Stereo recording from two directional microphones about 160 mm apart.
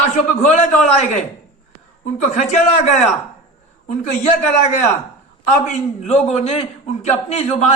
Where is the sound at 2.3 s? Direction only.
50° left (ahead or behind).